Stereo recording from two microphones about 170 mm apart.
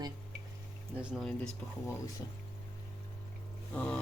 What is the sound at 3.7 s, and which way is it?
Speech, 10° left (ahead or behind).